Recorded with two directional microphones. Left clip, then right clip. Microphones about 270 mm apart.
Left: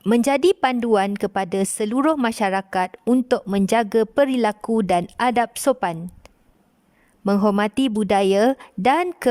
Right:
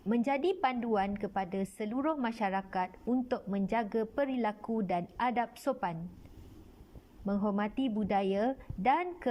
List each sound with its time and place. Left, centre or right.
0.1 s a woman's voice: left
7.3 s a woman's voice: left